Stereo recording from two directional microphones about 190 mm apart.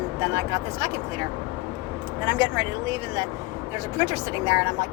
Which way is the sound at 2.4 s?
20° right (ahead or behind).